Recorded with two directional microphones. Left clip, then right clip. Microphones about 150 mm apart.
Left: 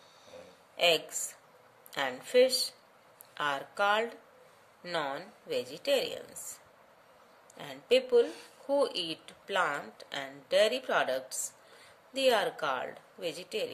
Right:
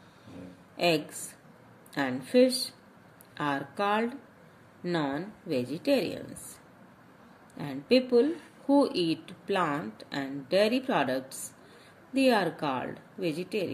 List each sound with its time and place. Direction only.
0.7 s speech: 25° left (ahead or behind)
7.5 s speech: 15° left (ahead or behind)